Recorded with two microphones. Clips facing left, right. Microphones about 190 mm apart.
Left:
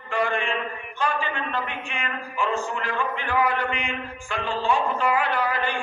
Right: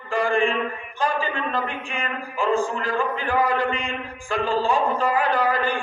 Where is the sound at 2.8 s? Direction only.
35° right (ahead or behind).